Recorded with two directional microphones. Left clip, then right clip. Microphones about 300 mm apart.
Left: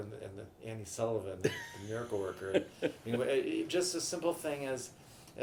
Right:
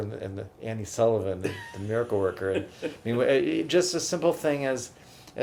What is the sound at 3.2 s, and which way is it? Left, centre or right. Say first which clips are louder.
Speech: right 10 dB; right.